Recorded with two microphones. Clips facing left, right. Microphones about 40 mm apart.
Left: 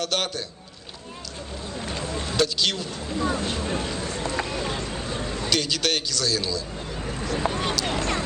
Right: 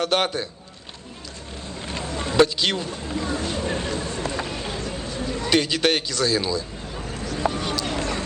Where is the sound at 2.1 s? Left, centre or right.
Right.